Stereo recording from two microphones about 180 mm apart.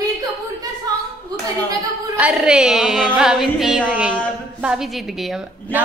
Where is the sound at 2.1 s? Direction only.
5° right (ahead or behind).